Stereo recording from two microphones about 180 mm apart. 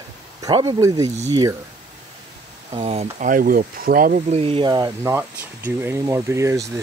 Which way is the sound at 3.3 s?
50° right (ahead or behind).